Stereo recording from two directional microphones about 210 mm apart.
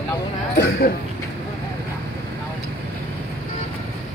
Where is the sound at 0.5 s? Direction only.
50° left (ahead or behind).